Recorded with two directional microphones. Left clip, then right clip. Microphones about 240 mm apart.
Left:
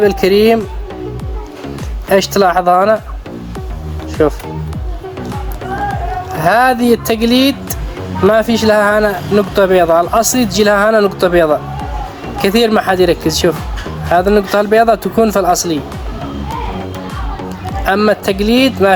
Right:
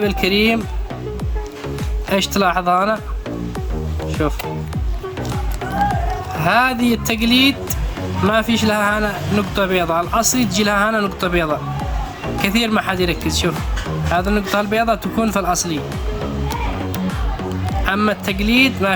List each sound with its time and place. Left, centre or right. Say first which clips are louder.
2.0 s speech: left 7 dB; right
4.2 s speech: left 10 dB; right
6.4 s speech: left 6 dB; right
17.8 s speech: left 7 dB; centre